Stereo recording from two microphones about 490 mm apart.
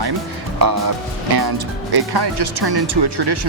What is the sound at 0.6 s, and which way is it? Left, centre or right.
Speech, right.